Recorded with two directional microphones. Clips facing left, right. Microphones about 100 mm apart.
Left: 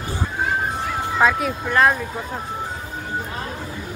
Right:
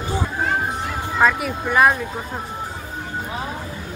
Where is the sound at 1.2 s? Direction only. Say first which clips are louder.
Right 1 dB; centre (ahead or behind).